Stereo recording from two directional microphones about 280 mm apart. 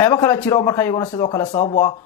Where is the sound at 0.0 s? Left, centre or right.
Centre.